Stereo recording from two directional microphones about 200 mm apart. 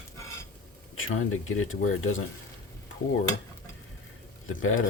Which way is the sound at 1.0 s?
90° left.